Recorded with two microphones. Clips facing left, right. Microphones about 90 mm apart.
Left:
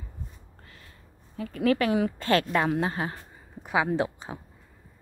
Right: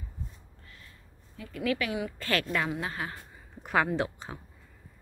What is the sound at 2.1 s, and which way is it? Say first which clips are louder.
A woman's voice: left 6 dB; 30° left (ahead or behind).